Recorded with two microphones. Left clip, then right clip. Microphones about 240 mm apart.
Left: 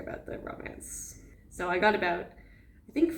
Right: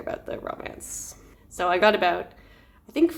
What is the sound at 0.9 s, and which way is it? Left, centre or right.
Speech, centre.